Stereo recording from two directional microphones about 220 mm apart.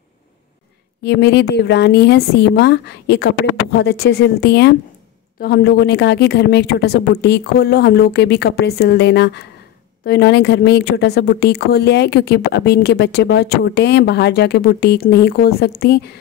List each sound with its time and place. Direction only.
1.0 s a woman's voice: 50° left (ahead or behind)